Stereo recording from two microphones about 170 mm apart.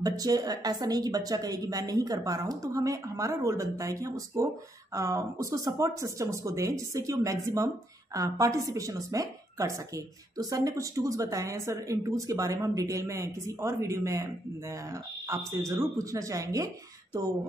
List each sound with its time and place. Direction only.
0.0 s speech: 20° right (ahead or behind)